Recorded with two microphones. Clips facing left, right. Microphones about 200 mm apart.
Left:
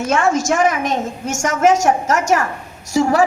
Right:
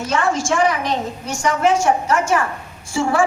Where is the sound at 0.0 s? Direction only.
45° left (ahead or behind).